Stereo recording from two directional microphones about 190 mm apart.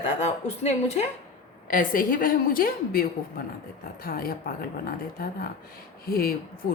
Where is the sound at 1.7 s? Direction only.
45° left (ahead or behind).